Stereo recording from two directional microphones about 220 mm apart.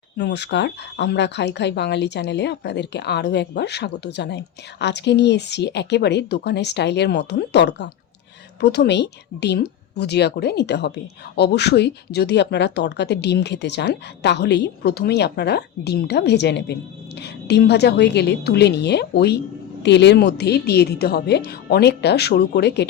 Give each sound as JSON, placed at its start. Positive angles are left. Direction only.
{"t": 0.2, "sound": "speech", "side_deg": 50}